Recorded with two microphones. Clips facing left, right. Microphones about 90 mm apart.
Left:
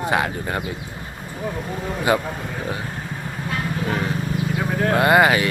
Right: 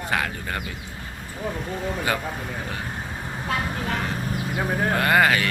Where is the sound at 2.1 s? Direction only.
25° left (ahead or behind).